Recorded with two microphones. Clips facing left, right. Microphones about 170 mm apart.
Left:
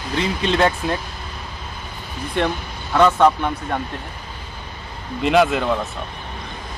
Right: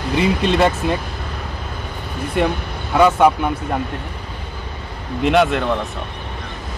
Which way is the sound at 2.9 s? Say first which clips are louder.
Right 1 dB; 10° right (ahead or behind).